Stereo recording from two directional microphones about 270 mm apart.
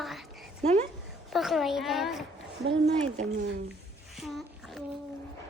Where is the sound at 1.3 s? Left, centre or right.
Centre.